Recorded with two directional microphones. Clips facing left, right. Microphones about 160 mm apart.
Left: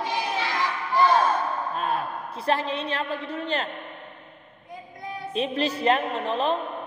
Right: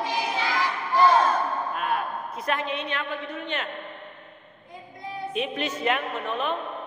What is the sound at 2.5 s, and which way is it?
A woman's voice, 30° left (ahead or behind).